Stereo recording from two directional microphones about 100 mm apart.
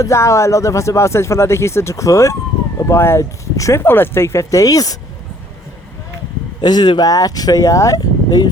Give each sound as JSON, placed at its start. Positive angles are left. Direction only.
{"t": 0.0, "sound": "speech", "side_deg": 30}
{"t": 6.6, "sound": "speech", "side_deg": 45}